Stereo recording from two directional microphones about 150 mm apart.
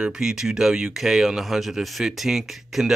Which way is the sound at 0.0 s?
5° right (ahead or behind).